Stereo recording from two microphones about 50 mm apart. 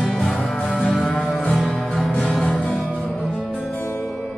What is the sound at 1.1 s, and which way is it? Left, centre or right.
Music, centre.